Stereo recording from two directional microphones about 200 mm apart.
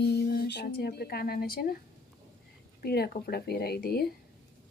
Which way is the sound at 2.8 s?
50° left (ahead or behind).